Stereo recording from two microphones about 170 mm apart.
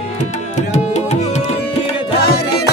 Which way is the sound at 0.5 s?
40° left (ahead or behind).